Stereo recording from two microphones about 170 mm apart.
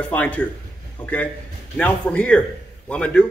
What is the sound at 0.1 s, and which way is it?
Speech, 10° left (ahead or behind).